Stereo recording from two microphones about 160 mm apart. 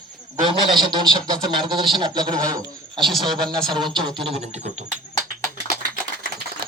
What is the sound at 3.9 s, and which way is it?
Speech, 40° right (ahead or behind).